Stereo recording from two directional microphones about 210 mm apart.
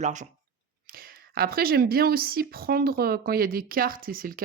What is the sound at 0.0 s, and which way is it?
A woman's voice, 35° right (ahead or behind).